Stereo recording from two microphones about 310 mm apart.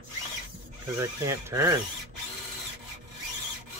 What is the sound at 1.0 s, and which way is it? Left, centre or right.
Speech, centre.